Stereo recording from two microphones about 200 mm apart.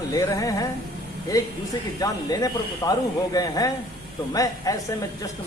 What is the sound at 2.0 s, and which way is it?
Speech, 15° left (ahead or behind).